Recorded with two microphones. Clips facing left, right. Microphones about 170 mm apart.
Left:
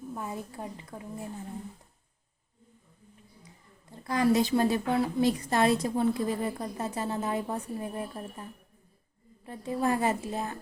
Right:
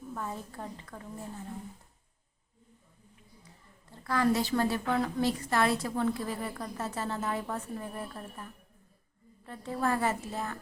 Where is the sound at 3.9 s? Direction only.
15° left (ahead or behind).